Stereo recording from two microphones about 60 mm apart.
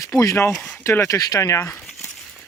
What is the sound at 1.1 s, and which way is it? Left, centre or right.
Speech, left.